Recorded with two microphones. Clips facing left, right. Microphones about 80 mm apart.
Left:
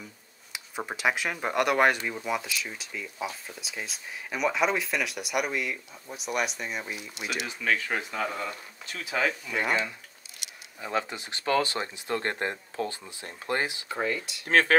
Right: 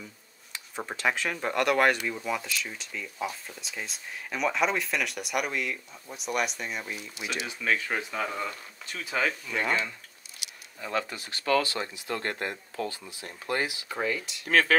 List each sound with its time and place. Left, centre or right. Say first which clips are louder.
0.5 s speech: left 1 dB; centre
10.8 s speech: left 1 dB; left
13.8 s speech: left 1 dB; centre
14.5 s speech: left 1 dB; left